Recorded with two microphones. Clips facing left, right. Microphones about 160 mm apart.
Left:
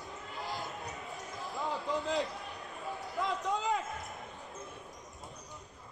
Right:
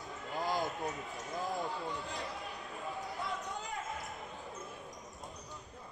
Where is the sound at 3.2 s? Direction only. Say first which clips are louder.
Left 11 dB; 90° left.